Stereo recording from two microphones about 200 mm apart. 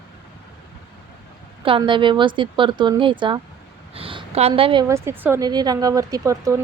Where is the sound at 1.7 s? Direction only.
25° right (ahead or behind).